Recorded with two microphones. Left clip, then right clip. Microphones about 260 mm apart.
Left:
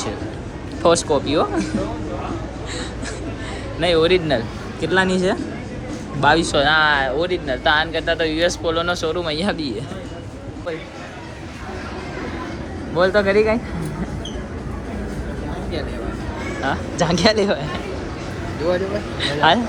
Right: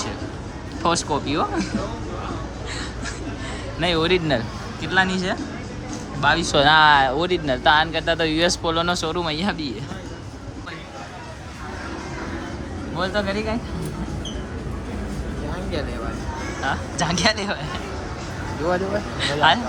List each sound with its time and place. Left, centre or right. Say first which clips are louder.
0.8 s speech: left 5 dB; centre
3.8 s speech: left 4 dB; centre
13.1 s speech: left 9 dB; centre
16.6 s speech: left 3 dB; centre
19.2 s speech: left 2 dB; centre